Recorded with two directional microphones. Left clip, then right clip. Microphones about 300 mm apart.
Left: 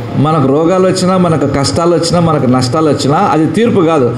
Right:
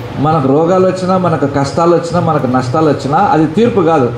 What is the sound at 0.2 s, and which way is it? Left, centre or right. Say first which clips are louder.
A man's voice: even; left.